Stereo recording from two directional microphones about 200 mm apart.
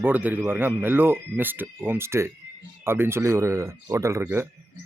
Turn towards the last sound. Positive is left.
turn(degrees=-10)  # may be behind; listen again after turning